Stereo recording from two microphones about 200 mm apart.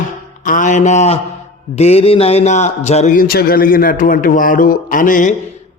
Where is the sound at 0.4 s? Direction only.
40° left (ahead or behind).